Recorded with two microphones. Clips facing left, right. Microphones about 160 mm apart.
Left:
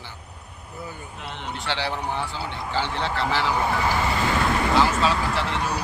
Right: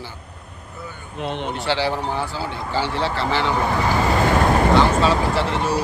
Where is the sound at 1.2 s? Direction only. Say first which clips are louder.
Right 13 dB; 20° right (ahead or behind).